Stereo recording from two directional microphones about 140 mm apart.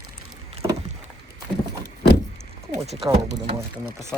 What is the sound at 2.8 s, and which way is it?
Speech, 50° right (ahead or behind).